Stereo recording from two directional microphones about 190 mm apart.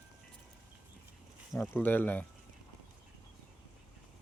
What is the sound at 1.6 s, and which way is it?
Speech, 10° left (ahead or behind).